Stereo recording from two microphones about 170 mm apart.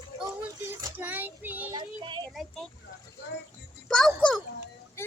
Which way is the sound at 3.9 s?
5° left (ahead or behind).